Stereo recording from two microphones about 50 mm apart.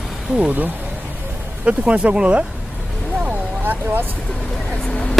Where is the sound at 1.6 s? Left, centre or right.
Right.